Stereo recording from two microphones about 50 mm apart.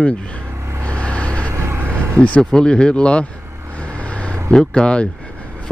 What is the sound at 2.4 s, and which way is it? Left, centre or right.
Speech, centre.